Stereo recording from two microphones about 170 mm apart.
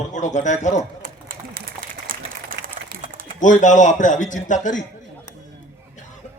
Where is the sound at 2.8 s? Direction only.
45° right (ahead or behind).